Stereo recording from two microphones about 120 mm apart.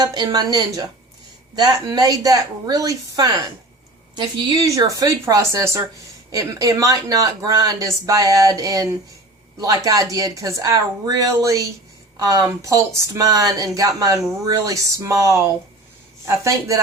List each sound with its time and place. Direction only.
0.0 s speech: 35° right (ahead or behind)